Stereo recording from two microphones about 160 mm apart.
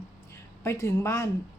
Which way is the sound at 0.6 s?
15° left (ahead or behind).